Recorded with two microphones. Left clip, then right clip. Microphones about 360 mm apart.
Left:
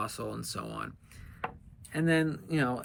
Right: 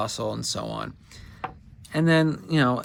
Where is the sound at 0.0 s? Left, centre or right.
Centre.